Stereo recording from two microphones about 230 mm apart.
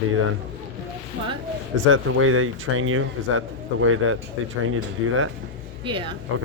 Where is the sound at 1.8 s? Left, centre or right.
Right.